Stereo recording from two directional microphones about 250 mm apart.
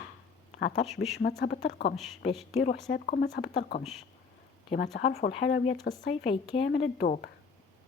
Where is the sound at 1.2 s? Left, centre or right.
Left.